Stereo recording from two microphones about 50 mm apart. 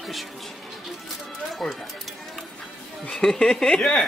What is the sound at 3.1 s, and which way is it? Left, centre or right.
Speech, centre.